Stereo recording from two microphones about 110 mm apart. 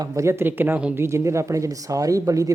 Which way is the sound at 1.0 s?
25° right (ahead or behind).